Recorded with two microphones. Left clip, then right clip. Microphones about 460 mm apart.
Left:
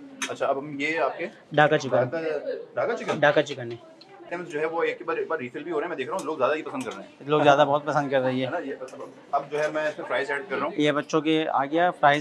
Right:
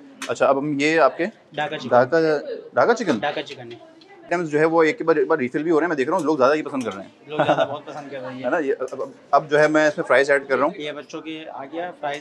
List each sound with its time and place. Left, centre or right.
0.3 s a man's voice: right
1.5 s speech: left
2.0 s a man's voice: right
3.2 s speech: left
4.3 s speech: right
7.2 s a man's voice: left
9.3 s a man's voice: right
10.8 s speech: left